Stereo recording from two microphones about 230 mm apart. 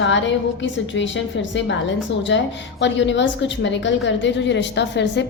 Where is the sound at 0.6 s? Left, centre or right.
Left.